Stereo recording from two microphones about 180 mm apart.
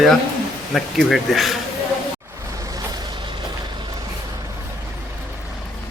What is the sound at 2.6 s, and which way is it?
Vehicle, 20° right (ahead or behind).